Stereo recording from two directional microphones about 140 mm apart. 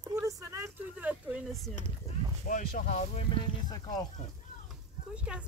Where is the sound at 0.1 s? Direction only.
25° right (ahead or behind).